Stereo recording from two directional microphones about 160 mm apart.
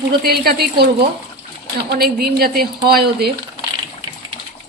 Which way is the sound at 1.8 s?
80° right.